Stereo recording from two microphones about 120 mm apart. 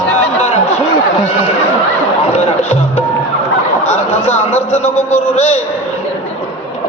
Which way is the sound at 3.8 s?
65° left (ahead or behind).